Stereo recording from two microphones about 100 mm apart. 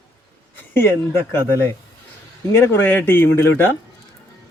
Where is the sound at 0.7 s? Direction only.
25° left (ahead or behind).